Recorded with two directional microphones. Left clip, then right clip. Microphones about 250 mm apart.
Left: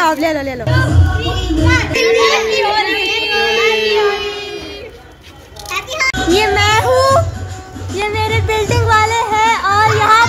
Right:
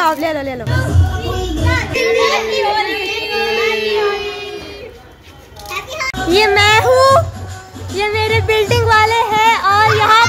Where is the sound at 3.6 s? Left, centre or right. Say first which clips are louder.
Left 3 dB; centre.